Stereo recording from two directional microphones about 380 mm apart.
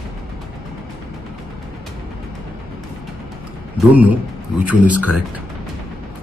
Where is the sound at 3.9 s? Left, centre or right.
Centre.